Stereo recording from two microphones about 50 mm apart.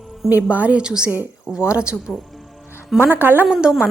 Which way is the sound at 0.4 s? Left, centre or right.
Right.